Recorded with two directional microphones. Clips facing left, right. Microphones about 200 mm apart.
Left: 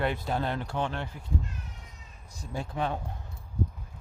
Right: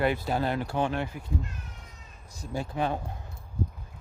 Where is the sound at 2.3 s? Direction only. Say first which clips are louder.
Right 3 dB; centre (ahead or behind).